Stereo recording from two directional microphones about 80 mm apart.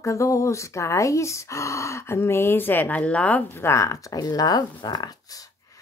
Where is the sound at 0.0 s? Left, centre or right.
Left.